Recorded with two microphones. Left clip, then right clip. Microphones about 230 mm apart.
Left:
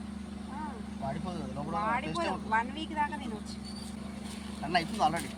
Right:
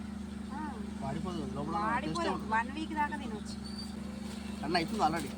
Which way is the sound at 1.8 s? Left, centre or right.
Centre.